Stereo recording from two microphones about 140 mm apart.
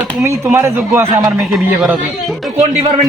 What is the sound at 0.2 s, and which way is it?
Speech, 20° right (ahead or behind).